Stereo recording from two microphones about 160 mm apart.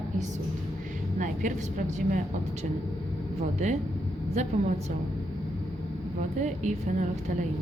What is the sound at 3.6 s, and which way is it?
Speech, 45° right (ahead or behind).